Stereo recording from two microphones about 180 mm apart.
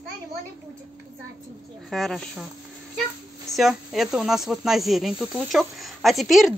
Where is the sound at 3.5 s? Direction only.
Centre (ahead or behind).